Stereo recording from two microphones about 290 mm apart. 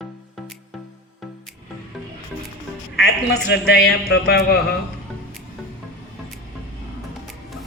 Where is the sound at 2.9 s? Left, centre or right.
Left.